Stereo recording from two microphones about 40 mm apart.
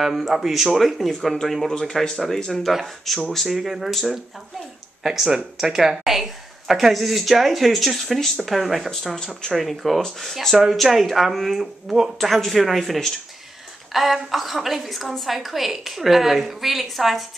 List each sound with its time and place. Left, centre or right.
0.0 s a woman's voice: centre
5.0 s a woman's voice: centre
9.2 s speech: centre
9.5 s a woman's voice: centre
10.6 s a woman's voice: centre